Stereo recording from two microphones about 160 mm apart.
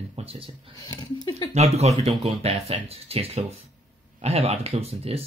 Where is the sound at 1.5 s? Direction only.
40° right (ahead or behind).